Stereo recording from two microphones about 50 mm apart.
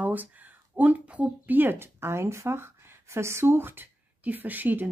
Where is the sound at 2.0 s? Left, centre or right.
Right.